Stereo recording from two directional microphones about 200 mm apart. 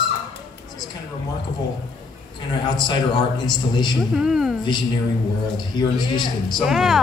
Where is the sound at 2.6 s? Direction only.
20° left (ahead or behind).